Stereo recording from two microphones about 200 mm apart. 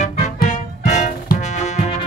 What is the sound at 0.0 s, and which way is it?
Music, 40° left (ahead or behind).